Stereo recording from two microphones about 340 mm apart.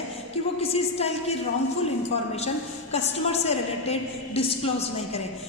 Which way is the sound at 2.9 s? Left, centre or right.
Centre.